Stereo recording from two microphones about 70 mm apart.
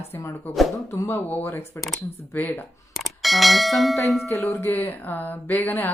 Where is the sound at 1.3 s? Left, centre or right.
Left.